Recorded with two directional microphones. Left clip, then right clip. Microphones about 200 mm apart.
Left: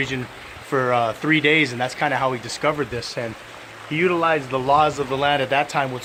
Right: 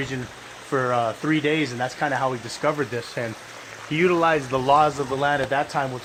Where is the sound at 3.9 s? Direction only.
45° right (ahead or behind).